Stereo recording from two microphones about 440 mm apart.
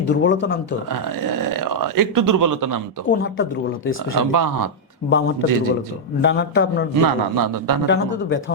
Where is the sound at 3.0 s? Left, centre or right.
Left.